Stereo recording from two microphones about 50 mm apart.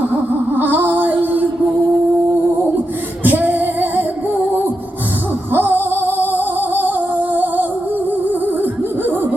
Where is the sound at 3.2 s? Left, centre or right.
Right.